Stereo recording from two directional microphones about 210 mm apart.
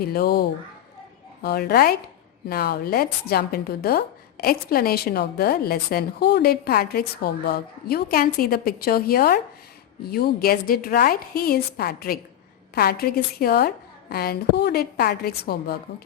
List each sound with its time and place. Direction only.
0.0 s a woman's voice: 45° left (ahead or behind)